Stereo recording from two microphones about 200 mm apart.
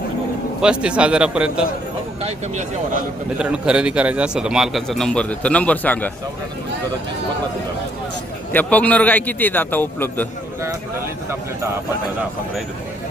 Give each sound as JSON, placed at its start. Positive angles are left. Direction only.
{"t": 0.6, "sound": "a man's voice", "side_deg": -5}
{"t": 2.2, "sound": "speech", "side_deg": -35}
{"t": 3.3, "sound": "a man's voice", "side_deg": -5}
{"t": 8.5, "sound": "a man's voice", "side_deg": 5}